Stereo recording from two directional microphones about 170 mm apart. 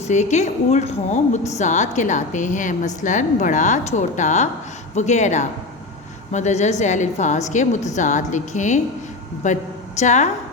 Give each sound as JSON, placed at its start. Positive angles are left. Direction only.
{"t": 0.1, "sound": "a woman's voice", "side_deg": 45}